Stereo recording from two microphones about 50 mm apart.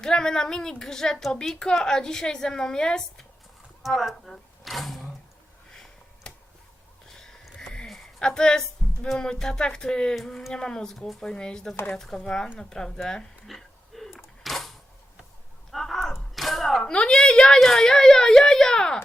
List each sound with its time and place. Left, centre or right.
0.0 s a woman's voice: centre
3.8 s speech: centre
5.7 s a sound: centre
7.9 s a sound: centre
8.2 s a woman's voice: centre
10.9 s speech: centre
11.2 s a woman's voice: centre
13.5 s a sound: centre
15.7 s arrow: centre
16.8 s a woman's voice: centre